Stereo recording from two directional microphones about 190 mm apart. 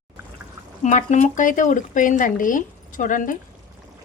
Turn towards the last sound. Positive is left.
turn(degrees=45)  # may be behind; listen again after turning